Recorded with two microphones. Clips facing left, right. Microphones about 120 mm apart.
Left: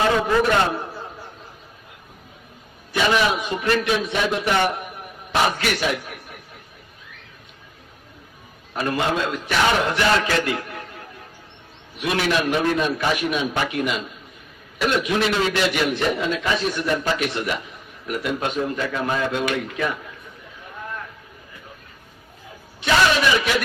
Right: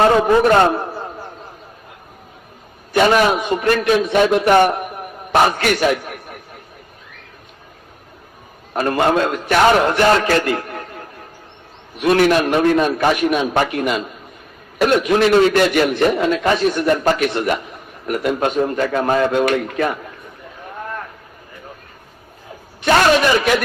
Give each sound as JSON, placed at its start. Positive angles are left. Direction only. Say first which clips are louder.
{"t": 0.0, "sound": "a sound", "louder": "right 6 dB", "side_deg": -45}
{"t": 2.9, "sound": "a man's voice", "louder": "right 6 dB", "side_deg": -50}
{"t": 8.7, "sound": "a man's voice", "louder": "right 7 dB", "side_deg": -50}
{"t": 22.8, "sound": "a man's voice", "louder": "right 5 dB", "side_deg": -50}